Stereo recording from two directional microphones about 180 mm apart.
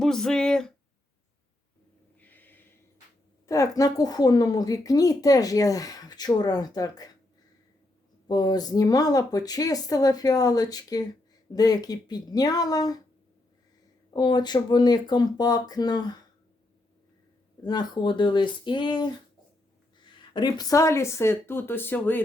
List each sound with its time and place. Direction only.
0.0 s speech: 5° left (ahead or behind)
2.1 s snort: 10° left (ahead or behind)
3.4 s speech: 20° left (ahead or behind)
8.3 s speech: 20° left (ahead or behind)
14.1 s speech: 25° left (ahead or behind)
17.6 s speech: 25° left (ahead or behind)
20.3 s speech: 20° left (ahead or behind)